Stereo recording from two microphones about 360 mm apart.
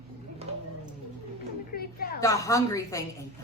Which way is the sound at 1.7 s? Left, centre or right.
Left.